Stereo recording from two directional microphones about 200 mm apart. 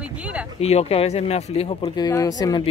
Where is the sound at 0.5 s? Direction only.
30° left (ahead or behind).